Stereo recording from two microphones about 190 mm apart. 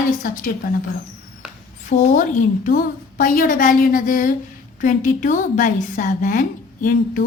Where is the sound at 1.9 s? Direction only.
40° left (ahead or behind).